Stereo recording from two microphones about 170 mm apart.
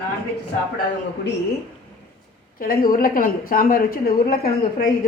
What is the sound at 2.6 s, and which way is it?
A woman's voice, 55° left (ahead or behind).